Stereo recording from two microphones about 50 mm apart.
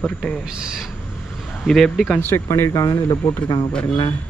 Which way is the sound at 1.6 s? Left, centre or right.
Centre.